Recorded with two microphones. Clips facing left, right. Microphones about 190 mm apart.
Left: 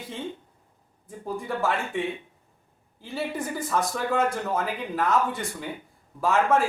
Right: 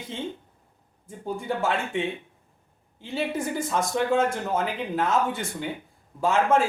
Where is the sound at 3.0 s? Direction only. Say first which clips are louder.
Right 2 dB; 25° right (ahead or behind).